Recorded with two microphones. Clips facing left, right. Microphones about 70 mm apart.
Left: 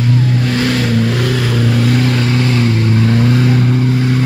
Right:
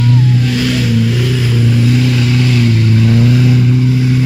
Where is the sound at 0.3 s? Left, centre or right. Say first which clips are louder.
Right 1 dB; left.